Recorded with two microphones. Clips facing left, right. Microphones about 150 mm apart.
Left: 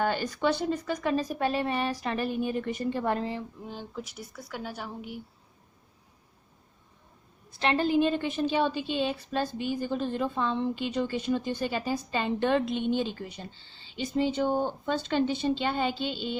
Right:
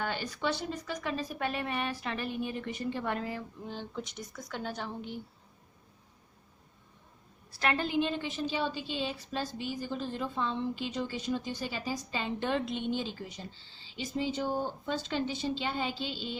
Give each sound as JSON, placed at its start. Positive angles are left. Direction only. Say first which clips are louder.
{"t": 0.0, "sound": "speech", "louder": "left 7 dB", "side_deg": 45}
{"t": 3.6, "sound": "a woman's voice", "louder": "left 1 dB", "side_deg": 5}
{"t": 7.5, "sound": "a woman's voice", "louder": "left 5 dB", "side_deg": 25}